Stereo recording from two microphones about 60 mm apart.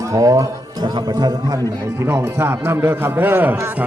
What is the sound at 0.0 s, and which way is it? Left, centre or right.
Speech, right.